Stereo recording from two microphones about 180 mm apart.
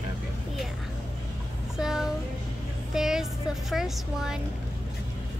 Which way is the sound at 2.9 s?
5° right (ahead or behind).